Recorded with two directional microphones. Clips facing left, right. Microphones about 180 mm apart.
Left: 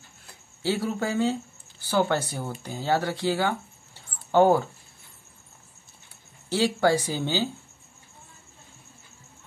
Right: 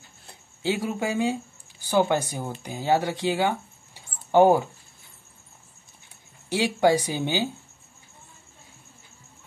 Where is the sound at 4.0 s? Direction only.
15° right (ahead or behind).